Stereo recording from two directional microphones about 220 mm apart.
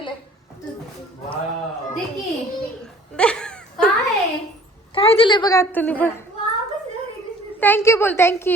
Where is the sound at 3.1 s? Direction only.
5° left (ahead or behind).